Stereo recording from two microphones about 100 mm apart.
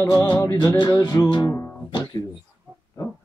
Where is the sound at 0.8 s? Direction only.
50° left (ahead or behind).